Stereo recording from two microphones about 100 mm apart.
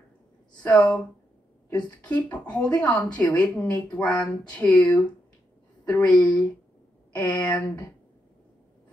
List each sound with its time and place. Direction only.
0.6 s speech: 10° left (ahead or behind)